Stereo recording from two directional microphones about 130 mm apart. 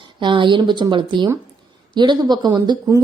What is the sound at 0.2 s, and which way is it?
A woman's voice, 40° right (ahead or behind).